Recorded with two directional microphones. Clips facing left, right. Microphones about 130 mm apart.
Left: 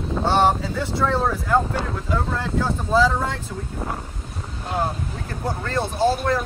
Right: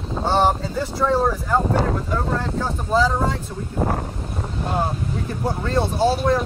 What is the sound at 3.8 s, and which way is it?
Speech, 50° right (ahead or behind).